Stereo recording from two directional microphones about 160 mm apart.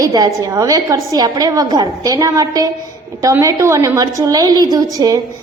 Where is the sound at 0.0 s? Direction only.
25° right (ahead or behind).